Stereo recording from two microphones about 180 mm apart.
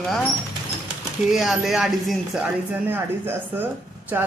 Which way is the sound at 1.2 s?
Centre (ahead or behind).